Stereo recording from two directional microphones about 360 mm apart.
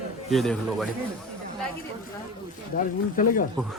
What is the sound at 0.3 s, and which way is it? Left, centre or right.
Speech, centre.